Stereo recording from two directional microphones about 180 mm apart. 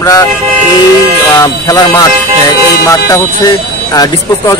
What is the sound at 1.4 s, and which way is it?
Speech, 20° left (ahead or behind).